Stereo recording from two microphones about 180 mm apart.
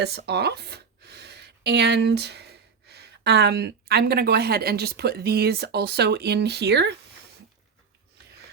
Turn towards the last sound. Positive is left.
turn(degrees=-70)  # may be behind; listen again after turning